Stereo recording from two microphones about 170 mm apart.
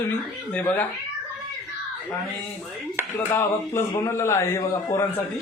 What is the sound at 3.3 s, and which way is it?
A man's voice, 15° left (ahead or behind).